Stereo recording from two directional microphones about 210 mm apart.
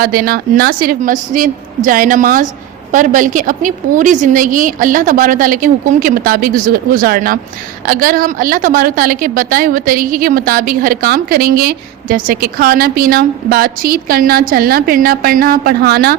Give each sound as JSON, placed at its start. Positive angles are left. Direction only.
{"t": 0.0, "sound": "a woman's voice", "side_deg": -45}